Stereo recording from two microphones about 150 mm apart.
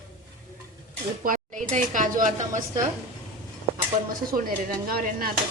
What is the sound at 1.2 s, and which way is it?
Speech, 60° right (ahead or behind).